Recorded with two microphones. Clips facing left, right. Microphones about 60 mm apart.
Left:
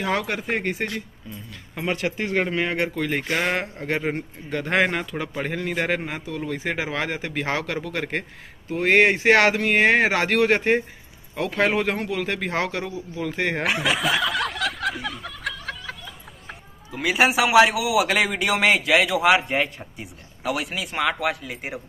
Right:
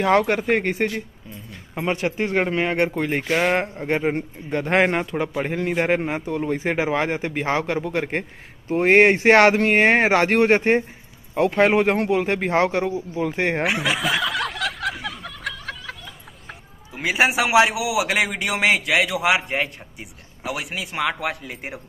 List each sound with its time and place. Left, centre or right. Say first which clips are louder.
0.1 s speech: right 7 dB; right
1.9 s a man's voice: right 2 dB; right
3.1 s speech: right 3 dB; centre
3.5 s a man's voice: right 4 dB; right
8.6 s a man's voice: right 3 dB; right
13.7 s snicker: even; centre
16.9 s a man's voice: even; right; by 21.8 s centre